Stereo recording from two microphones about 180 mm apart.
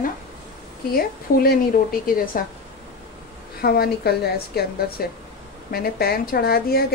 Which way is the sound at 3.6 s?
60° left (ahead or behind).